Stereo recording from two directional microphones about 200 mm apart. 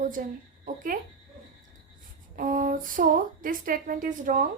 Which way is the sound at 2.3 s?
45° right (ahead or behind).